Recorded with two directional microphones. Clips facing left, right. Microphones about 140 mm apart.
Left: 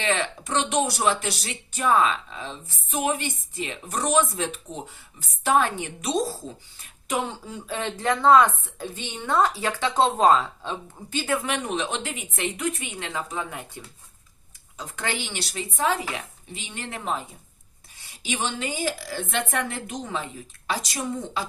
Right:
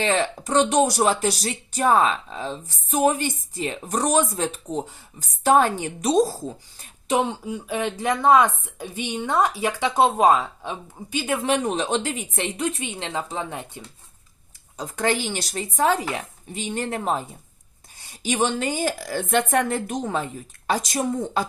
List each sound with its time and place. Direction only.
0.0 s speech: 35° right (ahead or behind)
7.3 s speech: 15° right (ahead or behind)
11.4 s speech: 35° right (ahead or behind)
14.8 s a woman's voice: 40° right (ahead or behind)